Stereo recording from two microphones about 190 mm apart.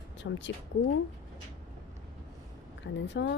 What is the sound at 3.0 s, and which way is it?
Speech, 70° left (ahead or behind).